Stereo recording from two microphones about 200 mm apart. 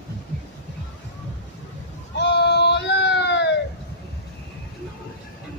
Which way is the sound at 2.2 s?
60° left (ahead or behind).